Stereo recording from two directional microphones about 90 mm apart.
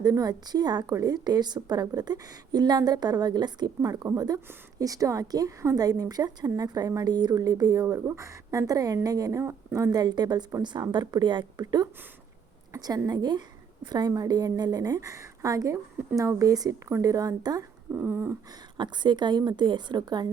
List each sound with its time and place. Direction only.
0.0 s a woman's voice: 45° right (ahead or behind)
17.9 s a sound: 25° right (ahead or behind)
18.8 s a woman's voice: 55° right (ahead or behind)